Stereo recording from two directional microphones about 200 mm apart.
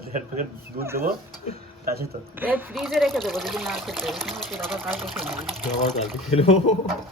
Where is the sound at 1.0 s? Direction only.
50° right (ahead or behind).